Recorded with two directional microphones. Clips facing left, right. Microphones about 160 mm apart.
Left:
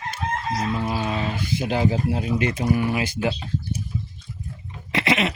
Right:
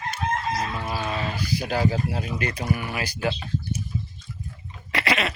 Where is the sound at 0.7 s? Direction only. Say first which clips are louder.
Left 3 dB; 15° left (ahead or behind).